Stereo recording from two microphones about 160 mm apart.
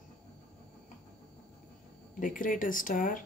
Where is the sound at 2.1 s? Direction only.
55° left (ahead or behind).